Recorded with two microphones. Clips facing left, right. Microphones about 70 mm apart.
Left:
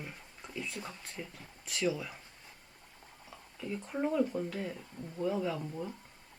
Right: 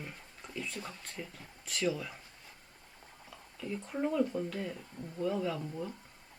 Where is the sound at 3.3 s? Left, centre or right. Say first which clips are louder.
Even; centre.